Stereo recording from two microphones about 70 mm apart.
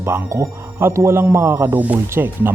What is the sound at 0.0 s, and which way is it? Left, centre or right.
Speech, right.